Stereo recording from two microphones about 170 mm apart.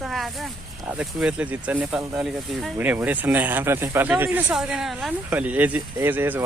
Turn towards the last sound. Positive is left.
turn(degrees=-10)  # may be behind; listen again after turning